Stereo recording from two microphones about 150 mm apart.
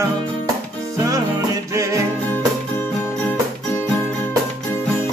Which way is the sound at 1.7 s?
20° right (ahead or behind).